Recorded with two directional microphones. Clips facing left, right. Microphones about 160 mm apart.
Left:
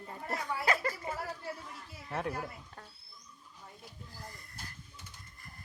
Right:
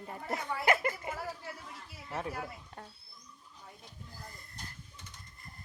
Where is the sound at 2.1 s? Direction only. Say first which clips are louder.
Left 2 dB; centre (ahead or behind).